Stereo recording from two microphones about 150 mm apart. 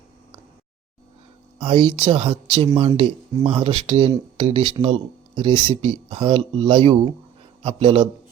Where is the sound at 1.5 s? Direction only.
35° right (ahead or behind).